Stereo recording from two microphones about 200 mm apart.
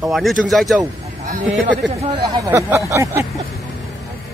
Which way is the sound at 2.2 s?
15° right (ahead or behind).